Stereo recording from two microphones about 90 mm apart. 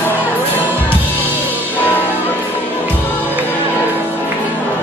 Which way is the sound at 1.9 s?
20° left (ahead or behind).